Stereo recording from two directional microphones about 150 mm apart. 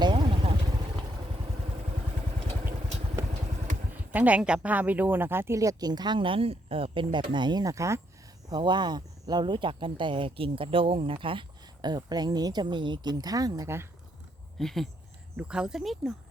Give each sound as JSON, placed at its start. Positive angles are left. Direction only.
{"t": 0.0, "sound": "vehicle", "side_deg": -30}
{"t": 4.1, "sound": "speech", "side_deg": -10}
{"t": 14.6, "sound": "speech", "side_deg": 0}